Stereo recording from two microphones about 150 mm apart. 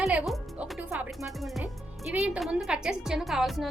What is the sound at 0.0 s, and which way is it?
Music, 5° right (ahead or behind).